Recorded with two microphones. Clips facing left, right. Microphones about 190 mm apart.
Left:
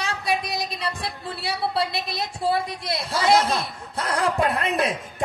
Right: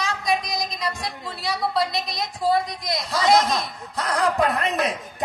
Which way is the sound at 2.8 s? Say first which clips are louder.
Right 1 dB; 30° left (ahead or behind).